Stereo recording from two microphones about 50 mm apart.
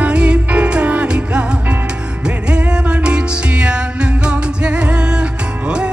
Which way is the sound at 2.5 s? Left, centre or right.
Right.